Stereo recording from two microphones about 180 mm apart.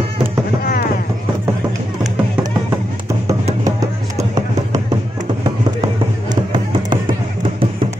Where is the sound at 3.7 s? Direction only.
20° right (ahead or behind).